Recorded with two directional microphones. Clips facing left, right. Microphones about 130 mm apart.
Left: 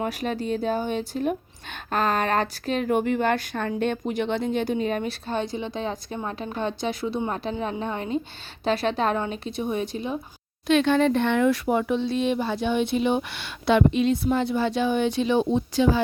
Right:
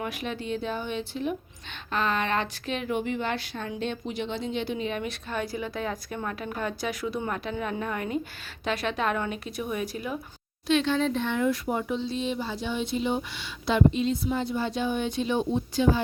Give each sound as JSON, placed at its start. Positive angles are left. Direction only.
{"t": 0.0, "sound": "a woman's voice", "side_deg": 40}
{"t": 10.7, "sound": "speech", "side_deg": 55}